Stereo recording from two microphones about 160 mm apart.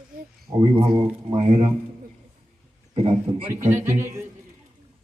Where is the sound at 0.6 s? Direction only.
30° right (ahead or behind).